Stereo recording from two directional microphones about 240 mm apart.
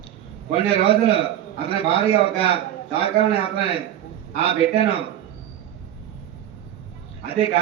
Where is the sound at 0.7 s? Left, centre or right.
Left.